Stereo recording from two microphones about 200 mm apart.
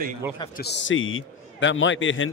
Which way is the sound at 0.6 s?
60° left (ahead or behind).